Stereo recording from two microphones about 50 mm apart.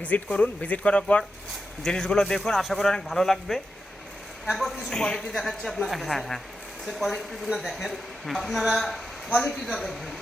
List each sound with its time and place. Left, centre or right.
0.0 s a man's voice: left; by 4.9 s centre
4.9 s a woman's voice: centre